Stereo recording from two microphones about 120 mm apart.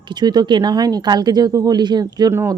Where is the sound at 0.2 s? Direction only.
35° right (ahead or behind).